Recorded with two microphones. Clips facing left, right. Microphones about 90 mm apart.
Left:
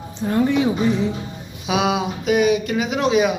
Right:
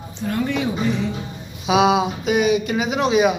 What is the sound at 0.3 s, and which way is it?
Speech, 20° left (ahead or behind).